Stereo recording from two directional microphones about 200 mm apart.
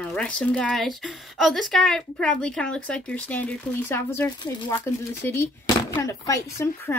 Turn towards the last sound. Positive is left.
turn(degrees=15)  # may be behind; listen again after turning